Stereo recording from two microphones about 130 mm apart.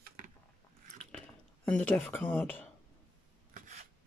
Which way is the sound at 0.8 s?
60° right (ahead or behind).